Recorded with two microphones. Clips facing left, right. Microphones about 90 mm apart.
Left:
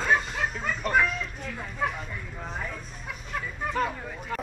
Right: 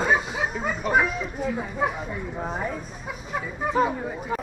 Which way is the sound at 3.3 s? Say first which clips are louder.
Right 5 dB; 5° right (ahead or behind).